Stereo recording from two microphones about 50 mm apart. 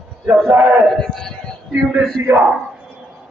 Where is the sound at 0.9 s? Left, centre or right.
Centre.